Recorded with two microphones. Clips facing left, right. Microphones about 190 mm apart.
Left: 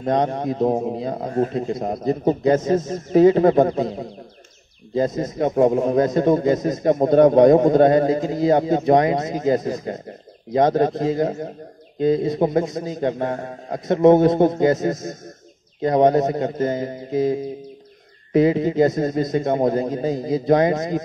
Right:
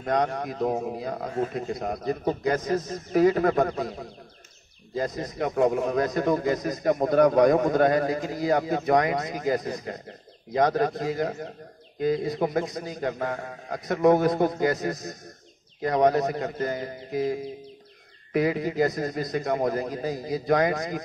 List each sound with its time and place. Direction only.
0.0 s a man's voice: 25° left (ahead or behind)